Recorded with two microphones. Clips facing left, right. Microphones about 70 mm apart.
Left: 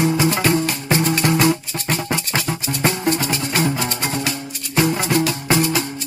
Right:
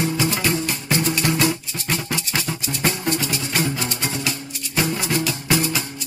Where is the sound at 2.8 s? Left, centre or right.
Left.